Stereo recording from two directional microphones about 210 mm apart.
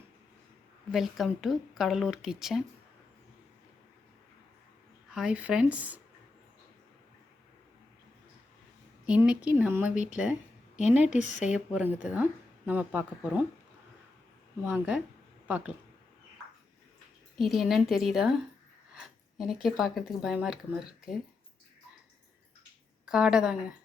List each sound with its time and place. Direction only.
0.9 s speech: centre (ahead or behind)
5.1 s speech: 5° right (ahead or behind)
9.0 s a woman's voice: 5° right (ahead or behind)
11.1 s speech: 35° left (ahead or behind)
11.4 s a woman's voice: 5° right (ahead or behind)
14.6 s a woman's voice: 10° right (ahead or behind)
17.3 s speech: centre (ahead or behind)
18.9 s a sound: centre (ahead or behind)
19.6 s speech: centre (ahead or behind)
23.0 s speech: 5° right (ahead or behind)